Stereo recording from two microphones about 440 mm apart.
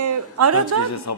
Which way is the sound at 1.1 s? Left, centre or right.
Left.